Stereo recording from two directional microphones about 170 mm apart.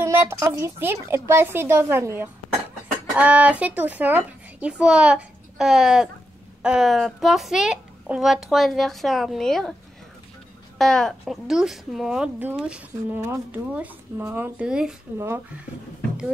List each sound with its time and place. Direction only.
0.0 s a woman's voice: 15° right (ahead or behind); by 9.8 s 5° left (ahead or behind)
10.8 s a woman's voice: 5° left (ahead or behind)
15.1 s speech: 15° right (ahead or behind)